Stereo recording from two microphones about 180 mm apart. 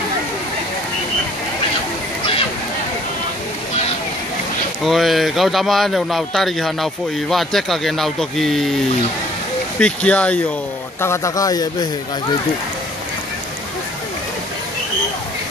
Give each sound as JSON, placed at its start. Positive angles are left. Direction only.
{"t": 4.8, "sound": "speech", "side_deg": 0}
{"t": 9.8, "sound": "a man's voice", "side_deg": 5}